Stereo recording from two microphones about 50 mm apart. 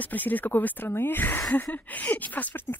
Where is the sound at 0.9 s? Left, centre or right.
Left.